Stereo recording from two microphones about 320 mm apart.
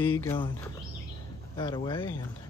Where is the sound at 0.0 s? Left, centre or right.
Centre.